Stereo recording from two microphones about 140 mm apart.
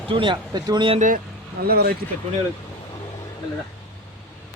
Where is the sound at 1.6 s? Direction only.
90° right.